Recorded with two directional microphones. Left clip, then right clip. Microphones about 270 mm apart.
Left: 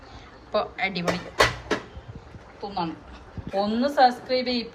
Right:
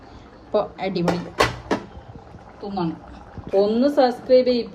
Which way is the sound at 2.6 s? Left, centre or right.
Centre.